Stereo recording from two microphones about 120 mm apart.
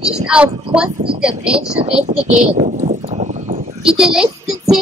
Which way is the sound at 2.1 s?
75° right (ahead or behind).